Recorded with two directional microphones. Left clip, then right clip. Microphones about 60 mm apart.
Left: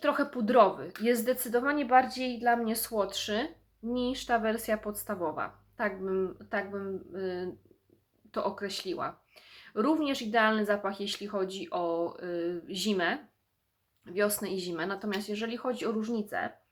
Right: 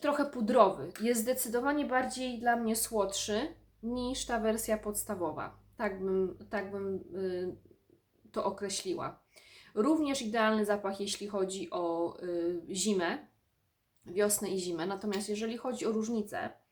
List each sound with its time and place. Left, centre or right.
0.0 s speech: right; by 16.5 s centre